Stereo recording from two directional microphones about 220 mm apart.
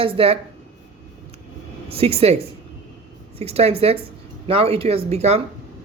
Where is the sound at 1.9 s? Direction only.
25° right (ahead or behind).